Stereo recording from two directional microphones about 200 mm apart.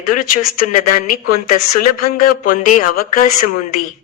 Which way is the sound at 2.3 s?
40° left (ahead or behind).